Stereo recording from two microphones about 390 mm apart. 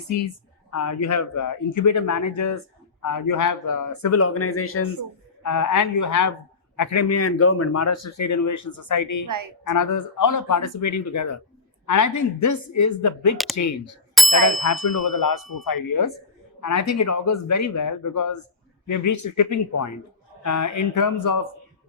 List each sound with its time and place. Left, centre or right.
0.7 s speech: left
5.4 s speech: left
13.3 s speech: centre
13.6 s speech: left
14.2 s ding: centre
14.6 s ding: left
15.6 s speech: left